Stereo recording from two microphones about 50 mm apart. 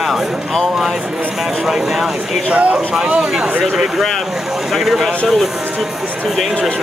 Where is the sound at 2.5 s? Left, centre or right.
Right.